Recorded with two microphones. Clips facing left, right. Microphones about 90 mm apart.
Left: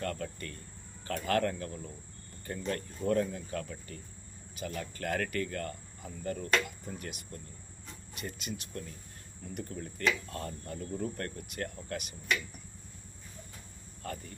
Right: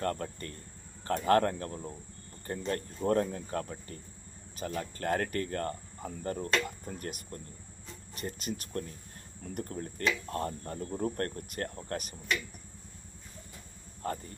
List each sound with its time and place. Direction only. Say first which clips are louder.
0.0 s cricket: right 3 dB; 35° right (ahead or behind)
8.1 s speech: right 3 dB; 40° right (ahead or behind)
10.3 s cricket: right 5 dB; 35° right (ahead or behind)